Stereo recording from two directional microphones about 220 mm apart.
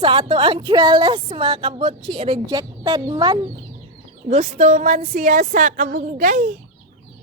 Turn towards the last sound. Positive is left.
turn(degrees=-40)  # may be behind; listen again after turning